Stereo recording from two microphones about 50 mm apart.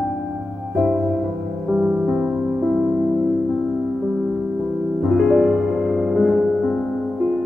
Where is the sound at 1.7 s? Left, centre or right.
Right.